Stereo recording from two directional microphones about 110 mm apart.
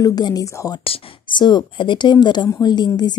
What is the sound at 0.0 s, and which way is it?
Speech, 35° left (ahead or behind).